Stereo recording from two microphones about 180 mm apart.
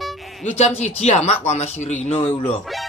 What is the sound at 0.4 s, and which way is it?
Speech, 40° left (ahead or behind).